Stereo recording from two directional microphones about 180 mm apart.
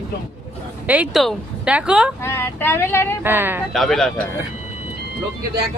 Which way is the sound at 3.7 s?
Centre (ahead or behind).